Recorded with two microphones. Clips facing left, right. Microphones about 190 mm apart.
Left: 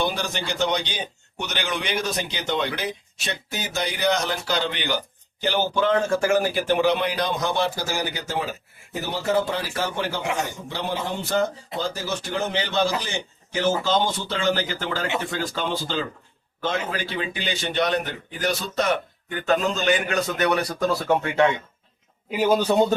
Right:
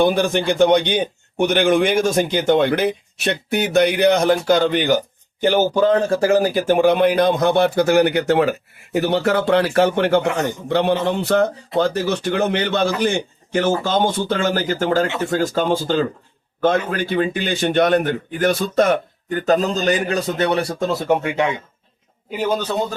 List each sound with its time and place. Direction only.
0.0 s a man's voice: 55° right (ahead or behind); by 21.5 s 15° right (ahead or behind)
22.3 s a man's voice: 5° left (ahead or behind)